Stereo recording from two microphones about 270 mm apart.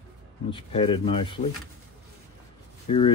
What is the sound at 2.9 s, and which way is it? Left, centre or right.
Speech, left.